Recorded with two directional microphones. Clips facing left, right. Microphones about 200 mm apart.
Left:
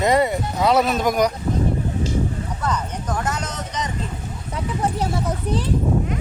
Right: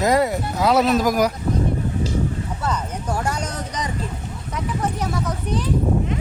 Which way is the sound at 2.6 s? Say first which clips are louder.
Left 1 dB; 10° right (ahead or behind).